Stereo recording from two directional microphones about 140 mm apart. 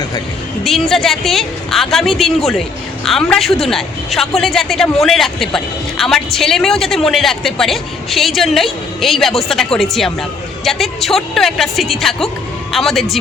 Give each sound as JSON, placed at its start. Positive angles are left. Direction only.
{"t": 0.6, "sound": "speech", "side_deg": 0}